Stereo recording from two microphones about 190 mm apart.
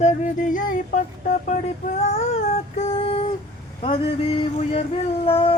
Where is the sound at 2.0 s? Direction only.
35° left (ahead or behind).